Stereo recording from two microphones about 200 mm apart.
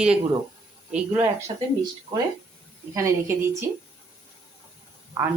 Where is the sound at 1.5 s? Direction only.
25° right (ahead or behind).